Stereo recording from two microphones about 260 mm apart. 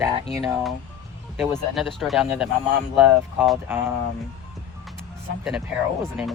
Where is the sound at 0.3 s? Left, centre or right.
Centre.